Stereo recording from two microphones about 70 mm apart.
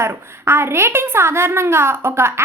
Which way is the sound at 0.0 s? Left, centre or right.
Right.